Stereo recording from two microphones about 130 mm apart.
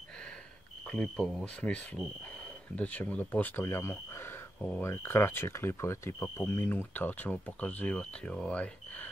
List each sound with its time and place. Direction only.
0.8 s speech: 5° left (ahead or behind)
4.6 s speech: 5° left (ahead or behind)
4.8 s speech: 20° left (ahead or behind)